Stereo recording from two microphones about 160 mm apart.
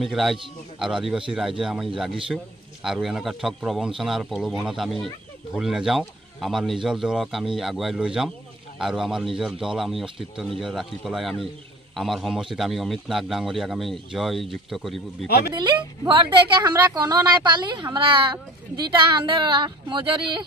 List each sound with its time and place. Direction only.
0.0 s a man's voice: centre (ahead or behind)
15.2 s speech: 80° left
15.5 s a woman's voice: 30° right (ahead or behind)